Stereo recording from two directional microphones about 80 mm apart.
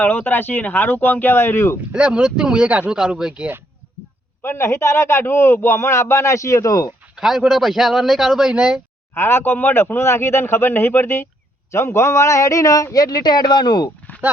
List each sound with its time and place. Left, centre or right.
0.0 s speech: left
1.9 s speech: centre
4.4 s a man's voice: left
7.2 s a man's voice: centre
9.1 s a man's voice: left